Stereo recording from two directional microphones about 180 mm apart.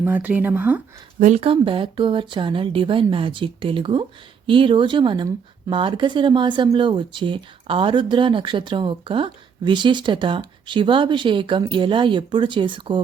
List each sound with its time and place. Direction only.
0.0 s speech: 10° right (ahead or behind)
1.2 s speech: 35° right (ahead or behind)